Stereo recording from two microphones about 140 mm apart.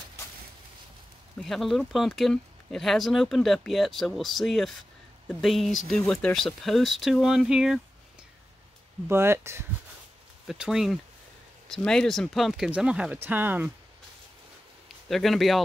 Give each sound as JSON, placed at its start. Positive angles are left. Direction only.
{"t": 1.4, "sound": "speech", "side_deg": 0}
{"t": 9.1, "sound": "speech", "side_deg": -20}
{"t": 10.4, "sound": "speech", "side_deg": 0}
{"t": 15.0, "sound": "speech", "side_deg": 0}